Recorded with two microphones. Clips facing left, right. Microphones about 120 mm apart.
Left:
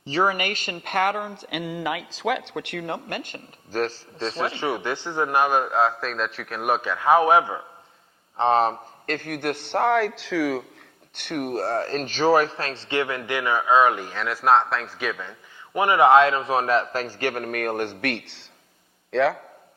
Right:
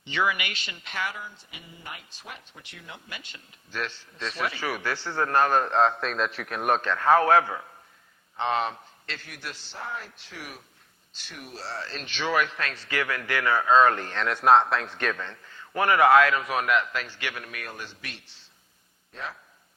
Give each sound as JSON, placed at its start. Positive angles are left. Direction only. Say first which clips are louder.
{"t": 0.0, "sound": "speech", "louder": "left 5 dB", "side_deg": 40}
{"t": 8.4, "sound": "a man's voice", "louder": "left 7 dB", "side_deg": 35}
{"t": 11.1, "sound": "a man's voice", "louder": "left 16 dB", "side_deg": 60}